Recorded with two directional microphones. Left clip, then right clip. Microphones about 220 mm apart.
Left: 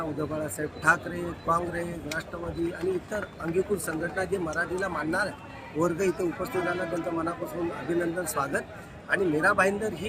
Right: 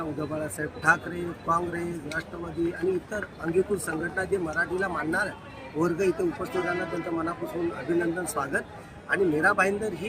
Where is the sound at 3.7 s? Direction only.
Centre (ahead or behind).